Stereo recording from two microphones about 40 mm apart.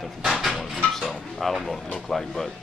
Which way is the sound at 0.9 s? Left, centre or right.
Centre.